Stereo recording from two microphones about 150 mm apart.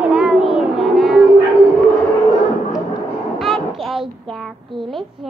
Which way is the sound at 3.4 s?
Centre (ahead or behind).